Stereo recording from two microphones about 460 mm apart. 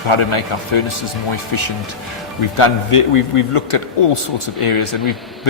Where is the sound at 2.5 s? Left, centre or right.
Left.